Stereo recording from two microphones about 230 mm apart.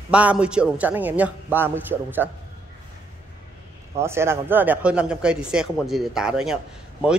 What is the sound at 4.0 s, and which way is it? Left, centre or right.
Speech, centre.